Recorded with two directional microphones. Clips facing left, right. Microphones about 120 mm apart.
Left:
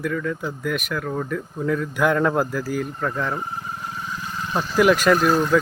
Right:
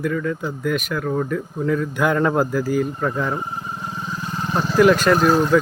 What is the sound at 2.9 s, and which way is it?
Vehicle, 10° right (ahead or behind).